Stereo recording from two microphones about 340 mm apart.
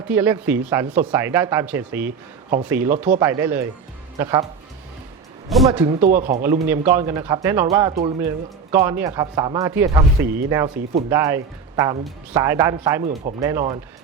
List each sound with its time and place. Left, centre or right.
0.0 s speech: centre
5.5 s speech: centre
5.8 s speech: right
6.7 s speech: centre